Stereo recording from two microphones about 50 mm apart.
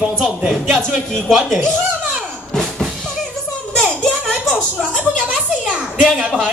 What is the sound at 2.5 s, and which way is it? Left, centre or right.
Music, centre.